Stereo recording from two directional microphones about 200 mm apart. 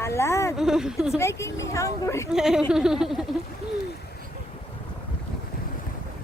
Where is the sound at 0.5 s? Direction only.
5° right (ahead or behind).